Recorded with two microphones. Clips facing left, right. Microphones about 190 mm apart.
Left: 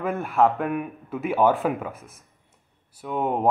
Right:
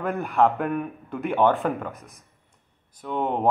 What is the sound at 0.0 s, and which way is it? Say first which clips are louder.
A man's voice: even; centre (ahead or behind).